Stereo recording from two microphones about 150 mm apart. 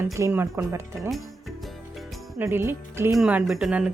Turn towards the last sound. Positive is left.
turn(degrees=-5)  # may be behind; listen again after turning